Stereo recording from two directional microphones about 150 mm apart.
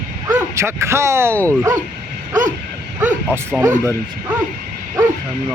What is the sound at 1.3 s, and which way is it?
Speech, 10° left (ahead or behind).